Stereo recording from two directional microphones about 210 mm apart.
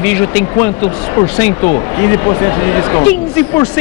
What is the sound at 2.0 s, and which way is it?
A man's voice, 15° left (ahead or behind).